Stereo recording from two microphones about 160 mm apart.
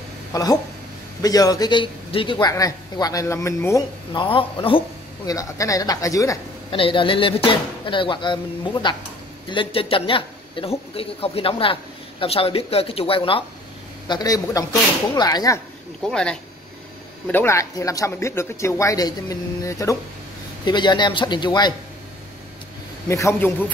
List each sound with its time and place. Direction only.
0.3 s speech: 20° left (ahead or behind)
4.1 s a man's voice: 30° left (ahead or behind)
5.3 s speech: 20° left (ahead or behind)
6.7 s speech: 30° left (ahead or behind)
16.1 s speech: 5° left (ahead or behind)
17.3 s speech: 15° left (ahead or behind)
23.0 s a man's voice: 20° left (ahead or behind)